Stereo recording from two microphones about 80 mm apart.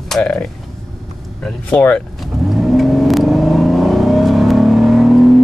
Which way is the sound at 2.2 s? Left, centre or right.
Centre.